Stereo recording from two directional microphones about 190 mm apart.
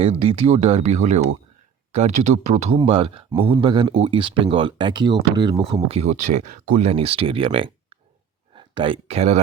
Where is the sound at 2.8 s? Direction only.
25° right (ahead or behind).